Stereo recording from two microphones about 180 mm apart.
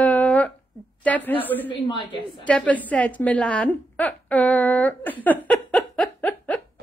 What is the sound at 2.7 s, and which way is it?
A woman's voice, 10° left (ahead or behind).